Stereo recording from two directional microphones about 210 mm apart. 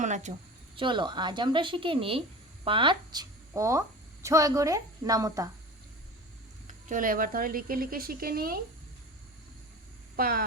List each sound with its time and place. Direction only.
0.0 s speech: 35° right (ahead or behind)
0.8 s a woman's voice: 20° right (ahead or behind)
6.7 s speech: 40° right (ahead or behind)
10.2 s speech: 45° right (ahead or behind)